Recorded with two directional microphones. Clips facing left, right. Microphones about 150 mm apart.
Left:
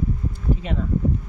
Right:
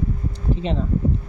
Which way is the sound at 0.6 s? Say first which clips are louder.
Right 4 dB; 30° right (ahead or behind).